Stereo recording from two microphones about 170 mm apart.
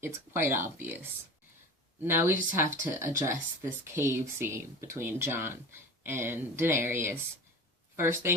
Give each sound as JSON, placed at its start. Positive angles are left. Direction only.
{"t": 0.0, "sound": "speech", "side_deg": -15}